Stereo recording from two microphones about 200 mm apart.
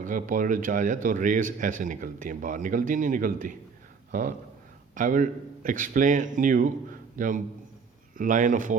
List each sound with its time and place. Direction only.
0.0 s speech: 40° right (ahead or behind)